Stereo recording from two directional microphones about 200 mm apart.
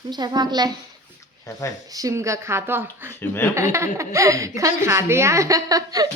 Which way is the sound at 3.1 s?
10° left (ahead or behind).